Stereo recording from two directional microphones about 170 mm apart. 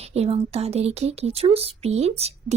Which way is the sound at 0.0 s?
40° right (ahead or behind).